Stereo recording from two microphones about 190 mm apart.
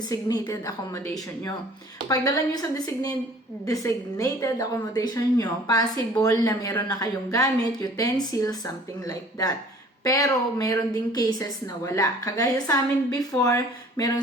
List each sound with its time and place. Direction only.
0.1 s a woman's voice: 15° left (ahead or behind)